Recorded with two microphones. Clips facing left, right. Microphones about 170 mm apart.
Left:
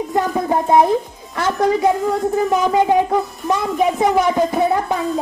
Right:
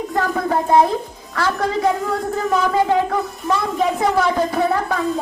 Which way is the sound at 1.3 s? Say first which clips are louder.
Left 3 dB; 20° left (ahead or behind).